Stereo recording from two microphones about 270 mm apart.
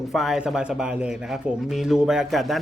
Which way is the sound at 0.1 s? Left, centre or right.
Centre.